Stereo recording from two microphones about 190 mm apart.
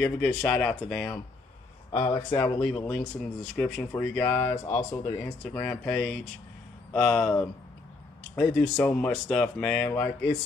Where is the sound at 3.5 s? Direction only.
5° left (ahead or behind).